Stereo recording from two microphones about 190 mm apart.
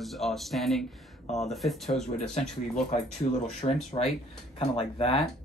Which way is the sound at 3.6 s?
35° left (ahead or behind).